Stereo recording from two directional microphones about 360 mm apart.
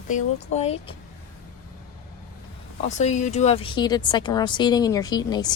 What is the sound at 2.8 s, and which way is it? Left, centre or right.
Speech, centre.